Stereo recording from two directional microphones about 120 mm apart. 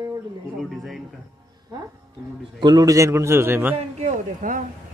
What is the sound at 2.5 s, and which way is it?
A man's voice, 35° right (ahead or behind).